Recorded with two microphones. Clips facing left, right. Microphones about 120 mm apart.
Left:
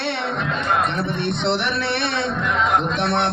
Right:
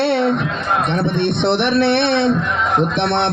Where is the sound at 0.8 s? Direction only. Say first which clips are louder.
Right 5 dB; 65° right (ahead or behind).